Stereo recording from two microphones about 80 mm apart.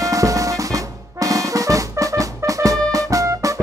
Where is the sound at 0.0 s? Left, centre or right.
Right.